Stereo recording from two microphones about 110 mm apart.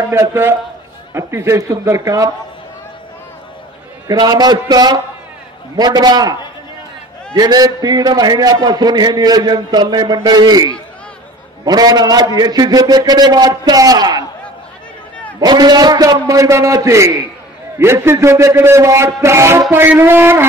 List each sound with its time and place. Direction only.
0.1 s a man's voice: 25° right (ahead or behind)
4.1 s a man's voice: 35° right (ahead or behind)
7.3 s a man's voice: 35° right (ahead or behind)
15.4 s a man's voice: 40° right (ahead or behind); by 20.4 s 20° right (ahead or behind)